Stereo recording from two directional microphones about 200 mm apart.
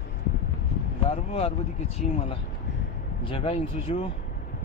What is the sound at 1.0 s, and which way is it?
Speech, 30° left (ahead or behind).